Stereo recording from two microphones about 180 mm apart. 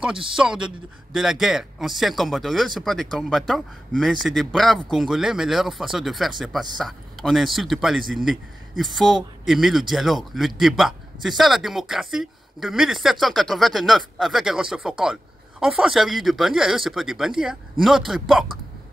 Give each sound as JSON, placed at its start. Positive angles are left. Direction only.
{"t": 0.4, "sound": "speech", "side_deg": -5}